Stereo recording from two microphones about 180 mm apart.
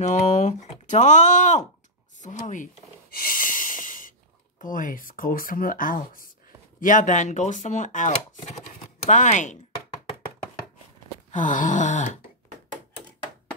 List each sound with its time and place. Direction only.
0.0 s speech: 40° left (ahead or behind)
2.2 s a sound: 45° left (ahead or behind)
4.6 s speech: 50° left (ahead or behind)
11.3 s speech: 45° left (ahead or behind)